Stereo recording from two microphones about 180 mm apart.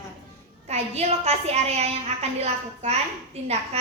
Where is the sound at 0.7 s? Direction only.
35° right (ahead or behind).